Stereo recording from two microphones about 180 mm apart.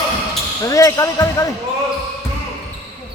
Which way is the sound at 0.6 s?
20° left (ahead or behind).